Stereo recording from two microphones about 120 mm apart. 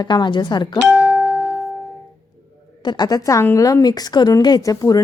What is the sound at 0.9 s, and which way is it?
Music, 25° left (ahead or behind).